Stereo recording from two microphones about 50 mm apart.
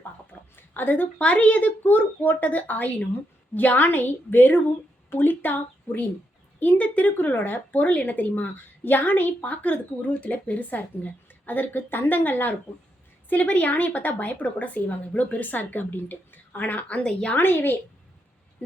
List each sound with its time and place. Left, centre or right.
0.5 s a sound: left
1.2 s a woman's voice: left
13.3 s speech: left
17.0 s speech: centre
17.3 s a woman's voice: left